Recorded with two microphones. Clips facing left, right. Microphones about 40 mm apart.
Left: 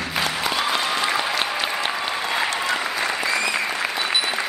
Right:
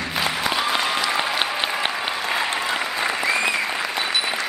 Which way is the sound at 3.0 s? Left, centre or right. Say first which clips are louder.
Right 1 dB; centre.